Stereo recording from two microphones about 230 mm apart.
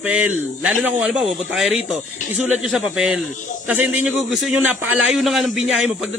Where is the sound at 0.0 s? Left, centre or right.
Centre.